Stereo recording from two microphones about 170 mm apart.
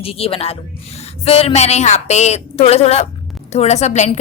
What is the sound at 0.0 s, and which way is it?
A woman's voice, 35° left (ahead or behind).